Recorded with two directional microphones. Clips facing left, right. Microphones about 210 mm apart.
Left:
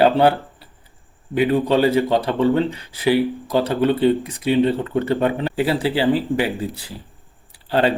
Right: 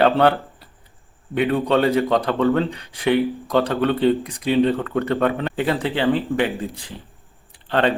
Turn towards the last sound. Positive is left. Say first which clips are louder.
# left 1 dB
turn(degrees=10)  # may be behind; listen again after turning